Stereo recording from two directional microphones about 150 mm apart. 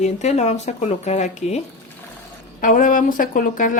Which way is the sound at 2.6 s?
65° left (ahead or behind).